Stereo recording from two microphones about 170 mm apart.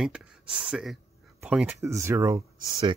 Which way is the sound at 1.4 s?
10° right (ahead or behind).